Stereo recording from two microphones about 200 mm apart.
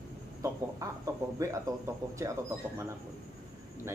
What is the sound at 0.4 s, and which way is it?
Speech, 15° right (ahead or behind).